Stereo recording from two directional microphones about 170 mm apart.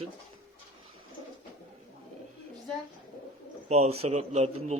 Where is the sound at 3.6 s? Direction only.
40° right (ahead or behind).